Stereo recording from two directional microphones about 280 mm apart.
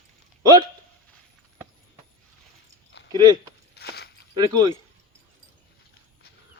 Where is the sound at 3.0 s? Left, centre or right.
Left.